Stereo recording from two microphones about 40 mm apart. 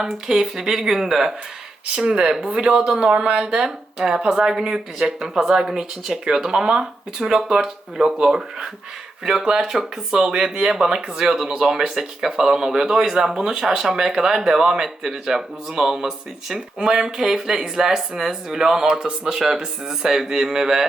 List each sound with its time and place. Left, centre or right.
0.0 s speech: centre; by 3.5 s right
3.5 s speech: centre